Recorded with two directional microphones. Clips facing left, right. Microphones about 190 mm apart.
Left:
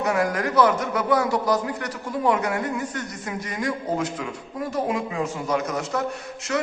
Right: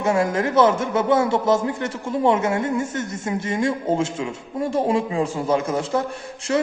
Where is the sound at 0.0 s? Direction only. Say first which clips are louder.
Right 3 dB; 25° right (ahead or behind).